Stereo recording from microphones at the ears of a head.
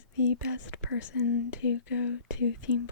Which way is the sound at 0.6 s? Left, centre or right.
Left.